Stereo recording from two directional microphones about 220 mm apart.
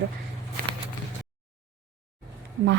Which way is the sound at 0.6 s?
40° right (ahead or behind).